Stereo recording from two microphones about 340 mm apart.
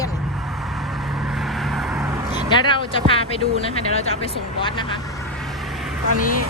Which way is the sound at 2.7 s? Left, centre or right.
Centre.